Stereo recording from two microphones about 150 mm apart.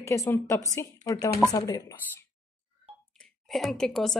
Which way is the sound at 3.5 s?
Centre (ahead or behind).